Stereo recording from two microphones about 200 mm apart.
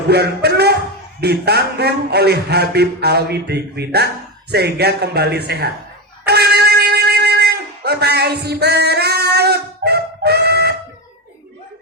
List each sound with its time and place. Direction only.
0.1 s a sound: 55° right (ahead or behind)
1.2 s speech: 55° right (ahead or behind)
6.2 s wind instrument: 55° right (ahead or behind)